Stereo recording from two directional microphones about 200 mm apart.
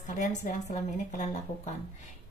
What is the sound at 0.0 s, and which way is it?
Speech, 35° left (ahead or behind).